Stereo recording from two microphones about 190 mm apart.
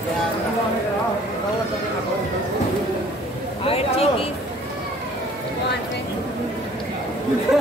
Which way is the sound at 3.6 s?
30° left (ahead or behind).